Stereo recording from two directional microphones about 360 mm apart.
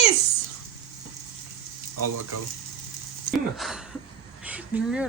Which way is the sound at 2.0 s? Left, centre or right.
Right.